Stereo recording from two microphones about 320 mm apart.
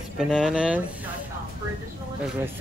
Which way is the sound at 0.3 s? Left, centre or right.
Centre.